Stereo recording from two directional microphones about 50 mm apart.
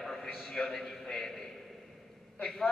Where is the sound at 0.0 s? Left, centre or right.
Centre.